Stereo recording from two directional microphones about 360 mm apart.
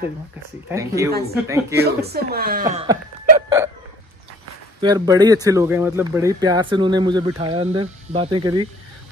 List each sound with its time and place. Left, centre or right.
0.7 s speech: centre
1.9 s speech: right; by 3.7 s centre
4.8 s speech: centre